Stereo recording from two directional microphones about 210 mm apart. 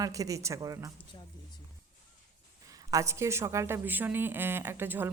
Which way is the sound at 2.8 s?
15° right (ahead or behind).